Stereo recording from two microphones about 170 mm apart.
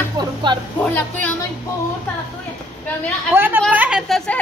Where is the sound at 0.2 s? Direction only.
25° right (ahead or behind).